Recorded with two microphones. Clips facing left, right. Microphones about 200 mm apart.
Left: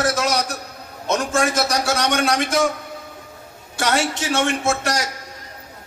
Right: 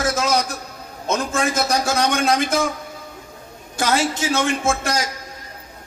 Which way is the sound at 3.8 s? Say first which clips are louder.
Right 1 dB; 70° left (ahead or behind).